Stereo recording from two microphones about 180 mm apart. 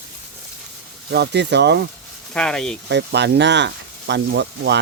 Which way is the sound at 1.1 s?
70° right (ahead or behind).